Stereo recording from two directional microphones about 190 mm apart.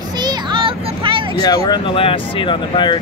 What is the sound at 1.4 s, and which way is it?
Speech, 20° left (ahead or behind).